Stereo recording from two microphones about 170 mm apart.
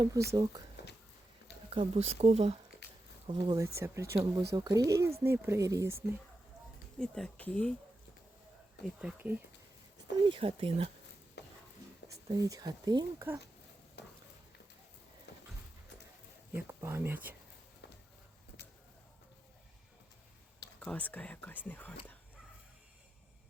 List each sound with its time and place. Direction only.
0.0 s speech: 20° right (ahead or behind)
1.7 s speech: 35° right (ahead or behind)
3.2 s speech: 25° right (ahead or behind)
7.0 s speech: 5° left (ahead or behind)
8.8 s speech: 5° right (ahead or behind)
10.2 s speech: 30° right (ahead or behind)
11.4 s stir: 85° left
12.0 s speech: 20° right (ahead or behind)
14.0 s a sound: 85° left
15.3 s horse: 80° left
16.5 s speech: 15° right (ahead or behind)
20.8 s speech: 10° left (ahead or behind)